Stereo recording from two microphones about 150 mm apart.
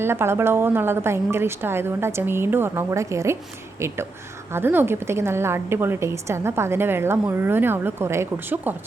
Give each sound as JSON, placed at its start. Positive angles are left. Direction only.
{"t": 0.0, "sound": "a woman's voice", "side_deg": -15}